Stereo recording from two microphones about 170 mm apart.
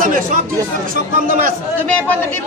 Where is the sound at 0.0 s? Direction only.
50° right (ahead or behind).